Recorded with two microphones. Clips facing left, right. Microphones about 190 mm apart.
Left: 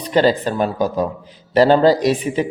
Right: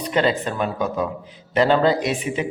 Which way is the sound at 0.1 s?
35° left (ahead or behind).